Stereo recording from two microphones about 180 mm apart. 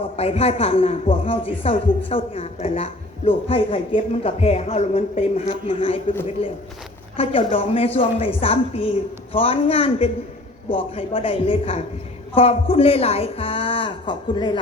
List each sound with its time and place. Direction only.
0.0 s a man's voice: 35° left (ahead or behind)